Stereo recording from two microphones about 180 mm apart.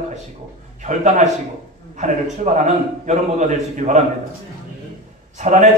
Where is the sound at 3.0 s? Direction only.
40° right (ahead or behind).